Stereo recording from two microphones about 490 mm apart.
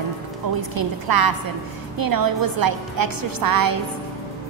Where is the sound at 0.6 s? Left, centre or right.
Right.